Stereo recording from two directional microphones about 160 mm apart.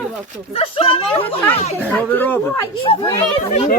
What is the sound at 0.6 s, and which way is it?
Speech, 35° left (ahead or behind).